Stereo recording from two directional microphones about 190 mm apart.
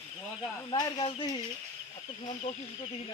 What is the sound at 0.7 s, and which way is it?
Speech, 25° left (ahead or behind).